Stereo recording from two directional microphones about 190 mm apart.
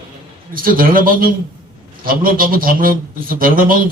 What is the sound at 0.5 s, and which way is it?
A man's voice, 50° right (ahead or behind).